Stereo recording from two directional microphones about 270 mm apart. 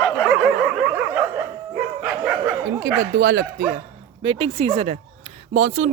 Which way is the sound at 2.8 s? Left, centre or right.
Right.